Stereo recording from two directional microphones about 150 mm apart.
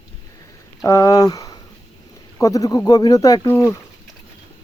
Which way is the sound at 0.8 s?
20° left (ahead or behind).